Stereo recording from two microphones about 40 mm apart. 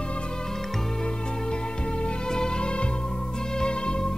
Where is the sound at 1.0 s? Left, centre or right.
Left.